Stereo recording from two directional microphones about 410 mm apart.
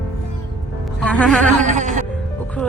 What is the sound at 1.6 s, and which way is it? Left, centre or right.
Music, centre.